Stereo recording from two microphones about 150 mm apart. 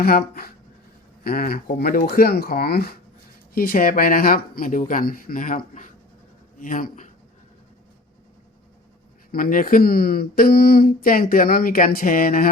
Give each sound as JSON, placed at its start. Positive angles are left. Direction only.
{"t": 0.0, "sound": "speech", "side_deg": 90}
{"t": 3.5, "sound": "speech", "side_deg": 75}
{"t": 9.3, "sound": "speech", "side_deg": 70}